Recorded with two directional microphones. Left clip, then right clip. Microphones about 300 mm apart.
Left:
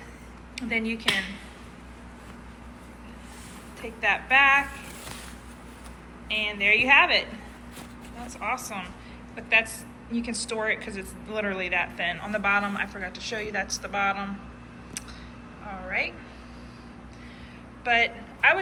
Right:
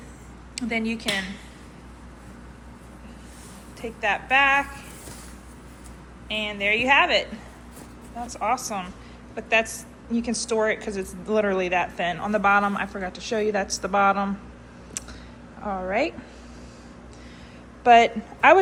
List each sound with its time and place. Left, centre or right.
0.5 s a woman's voice: centre
3.8 s speech: centre
6.2 s a woman's voice: centre
8.3 s a woman's voice: centre
17.8 s a woman's voice: centre